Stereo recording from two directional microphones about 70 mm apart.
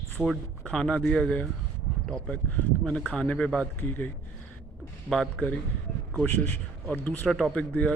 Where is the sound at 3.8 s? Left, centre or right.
Left.